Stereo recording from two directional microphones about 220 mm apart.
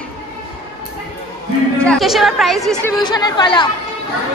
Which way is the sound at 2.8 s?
20° left (ahead or behind).